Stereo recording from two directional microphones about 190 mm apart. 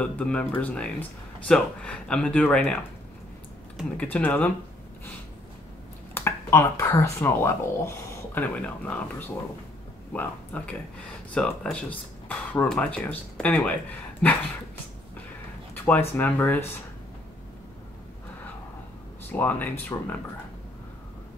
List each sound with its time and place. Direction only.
0.0 s speech: 5° left (ahead or behind)
6.1 s speech: 15° left (ahead or behind)
10.1 s speech: 5° left (ahead or behind)
15.7 s speech: 10° left (ahead or behind)
19.3 s speech: 10° left (ahead or behind)